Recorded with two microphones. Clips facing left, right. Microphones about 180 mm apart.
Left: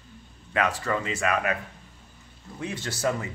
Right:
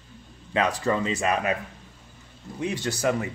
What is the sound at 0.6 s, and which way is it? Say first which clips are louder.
Speech: right 3 dB; 20° right (ahead or behind).